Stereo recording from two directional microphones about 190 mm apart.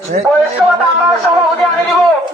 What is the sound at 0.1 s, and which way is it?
Speech, 45° right (ahead or behind).